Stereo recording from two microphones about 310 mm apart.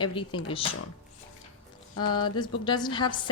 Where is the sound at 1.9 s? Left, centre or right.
Left.